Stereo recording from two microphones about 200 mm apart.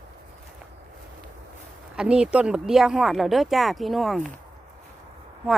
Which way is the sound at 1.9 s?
5° right (ahead or behind).